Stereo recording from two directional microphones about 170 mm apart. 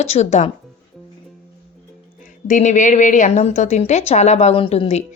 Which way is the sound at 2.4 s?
45° left (ahead or behind).